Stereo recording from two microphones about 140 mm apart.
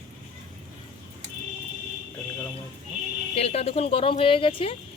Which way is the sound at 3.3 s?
45° left (ahead or behind).